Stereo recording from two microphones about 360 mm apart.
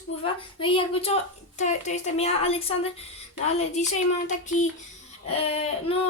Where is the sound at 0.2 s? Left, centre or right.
Centre.